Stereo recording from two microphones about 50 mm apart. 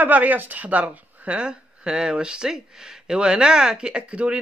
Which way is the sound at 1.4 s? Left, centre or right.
Centre.